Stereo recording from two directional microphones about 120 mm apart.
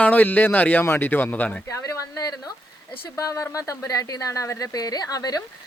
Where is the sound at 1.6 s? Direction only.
25° left (ahead or behind).